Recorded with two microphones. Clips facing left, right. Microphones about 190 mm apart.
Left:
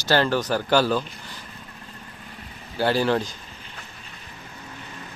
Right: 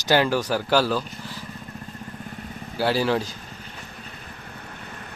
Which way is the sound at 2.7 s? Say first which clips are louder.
Left 1 dB; 5° right (ahead or behind).